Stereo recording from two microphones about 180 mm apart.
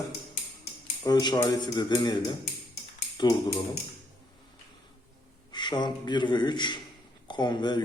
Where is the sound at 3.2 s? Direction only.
20° left (ahead or behind).